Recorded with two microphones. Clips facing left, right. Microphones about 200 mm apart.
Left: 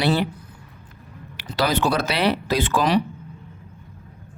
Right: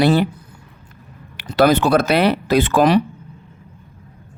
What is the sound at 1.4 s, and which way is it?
Speech, 55° right (ahead or behind).